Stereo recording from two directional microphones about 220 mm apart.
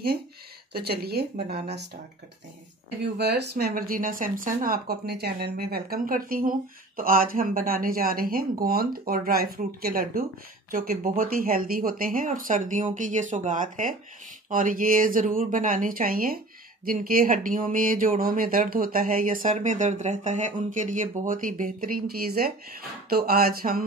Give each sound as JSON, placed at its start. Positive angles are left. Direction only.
{"t": 0.7, "sound": "speech", "side_deg": -45}
{"t": 3.0, "sound": "speech", "side_deg": -50}